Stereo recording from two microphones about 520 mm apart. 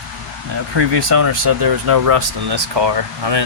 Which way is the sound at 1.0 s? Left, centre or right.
Right.